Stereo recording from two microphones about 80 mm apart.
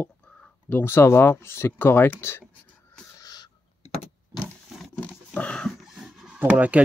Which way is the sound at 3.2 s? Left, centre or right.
Left.